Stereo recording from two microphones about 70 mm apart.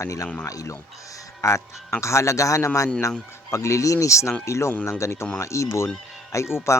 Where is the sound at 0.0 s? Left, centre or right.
Left.